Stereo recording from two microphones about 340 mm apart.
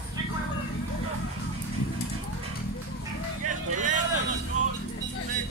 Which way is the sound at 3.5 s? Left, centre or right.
Right.